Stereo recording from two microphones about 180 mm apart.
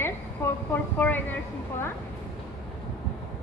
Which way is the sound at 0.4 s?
15° left (ahead or behind).